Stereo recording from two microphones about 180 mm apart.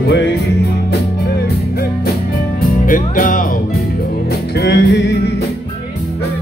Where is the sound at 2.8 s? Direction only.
50° left (ahead or behind).